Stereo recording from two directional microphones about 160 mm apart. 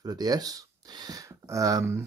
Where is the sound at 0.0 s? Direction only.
25° right (ahead or behind).